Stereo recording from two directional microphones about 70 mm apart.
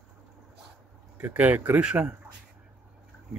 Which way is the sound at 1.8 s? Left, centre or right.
Centre.